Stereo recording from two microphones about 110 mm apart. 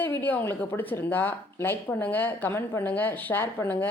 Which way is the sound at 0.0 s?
20° left (ahead or behind).